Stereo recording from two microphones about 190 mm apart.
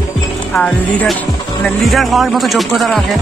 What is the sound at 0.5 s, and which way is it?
Speech, 5° left (ahead or behind).